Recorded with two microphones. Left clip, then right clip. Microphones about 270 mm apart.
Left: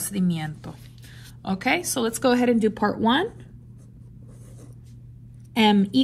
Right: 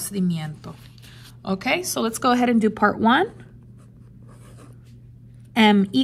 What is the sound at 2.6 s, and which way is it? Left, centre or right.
Speech, right.